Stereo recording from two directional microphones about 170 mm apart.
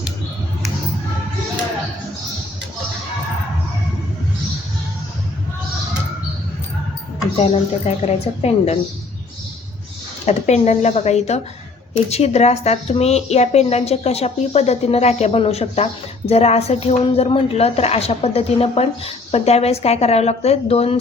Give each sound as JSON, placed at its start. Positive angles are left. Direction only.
{"t": 8.0, "sound": "a woman's voice", "side_deg": 40}
{"t": 10.2, "sound": "a woman's voice", "side_deg": 40}